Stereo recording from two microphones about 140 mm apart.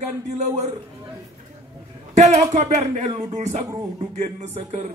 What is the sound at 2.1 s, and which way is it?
Speech, 55° right (ahead or behind).